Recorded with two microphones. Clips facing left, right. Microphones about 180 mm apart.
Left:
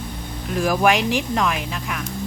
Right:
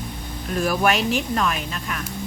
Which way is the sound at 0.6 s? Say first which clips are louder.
Left 2 dB; 15° left (ahead or behind).